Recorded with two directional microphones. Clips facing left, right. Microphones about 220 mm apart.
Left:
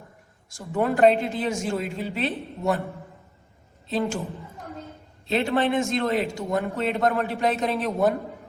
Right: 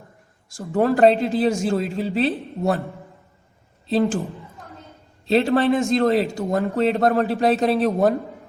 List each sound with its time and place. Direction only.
0.5 s a man's voice: 35° right (ahead or behind)
3.8 s a man's voice: 35° right (ahead or behind)
5.3 s a man's voice: 35° right (ahead or behind)